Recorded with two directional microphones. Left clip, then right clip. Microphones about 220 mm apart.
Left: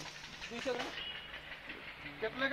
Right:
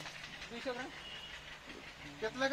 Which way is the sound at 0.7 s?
30° left (ahead or behind).